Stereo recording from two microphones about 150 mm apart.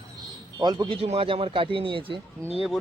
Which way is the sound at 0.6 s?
25° right (ahead or behind).